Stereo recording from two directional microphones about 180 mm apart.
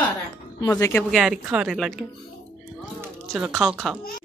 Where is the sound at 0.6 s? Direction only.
20° left (ahead or behind).